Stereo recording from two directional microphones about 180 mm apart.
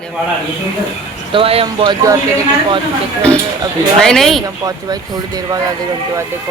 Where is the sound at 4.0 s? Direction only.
Centre (ahead or behind).